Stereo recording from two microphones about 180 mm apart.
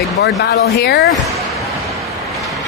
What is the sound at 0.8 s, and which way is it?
Speech, 65° left (ahead or behind).